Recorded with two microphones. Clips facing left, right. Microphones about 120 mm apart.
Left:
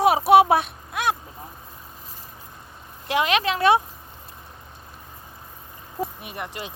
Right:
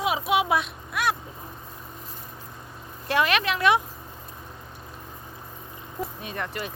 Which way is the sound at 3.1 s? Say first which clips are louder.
Left 2 dB; 25° left (ahead or behind).